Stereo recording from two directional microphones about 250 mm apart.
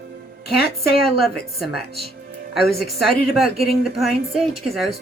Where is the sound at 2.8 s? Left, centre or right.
Centre.